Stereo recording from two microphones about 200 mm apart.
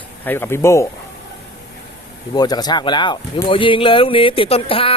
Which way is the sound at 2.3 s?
20° left (ahead or behind).